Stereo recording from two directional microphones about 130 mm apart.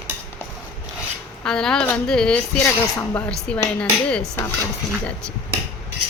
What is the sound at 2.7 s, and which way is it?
Speech, 20° left (ahead or behind).